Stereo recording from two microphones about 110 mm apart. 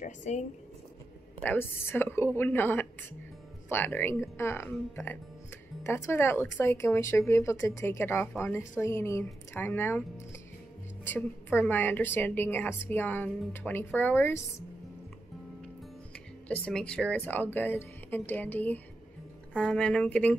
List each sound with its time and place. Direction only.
0.2 s speech: 90° left
1.4 s a woman's voice: 20° left (ahead or behind)
16.6 s a woman's voice: 10° left (ahead or behind)